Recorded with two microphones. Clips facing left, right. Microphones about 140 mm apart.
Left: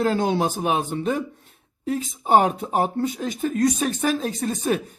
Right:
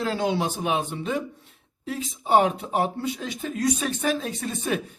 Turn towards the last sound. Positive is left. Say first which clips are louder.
# left 4 dB
turn(degrees=40)  # may be behind; listen again after turning